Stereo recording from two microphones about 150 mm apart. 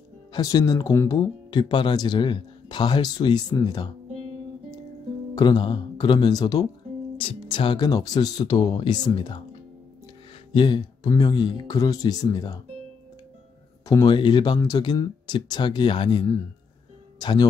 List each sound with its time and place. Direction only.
0.3 s speech: 25° left (ahead or behind)
5.3 s speech: 30° left (ahead or behind)
10.5 s speech: 30° left (ahead or behind)
13.8 s speech: 25° left (ahead or behind)